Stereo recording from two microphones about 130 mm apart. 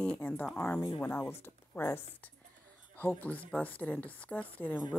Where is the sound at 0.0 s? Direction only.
10° left (ahead or behind).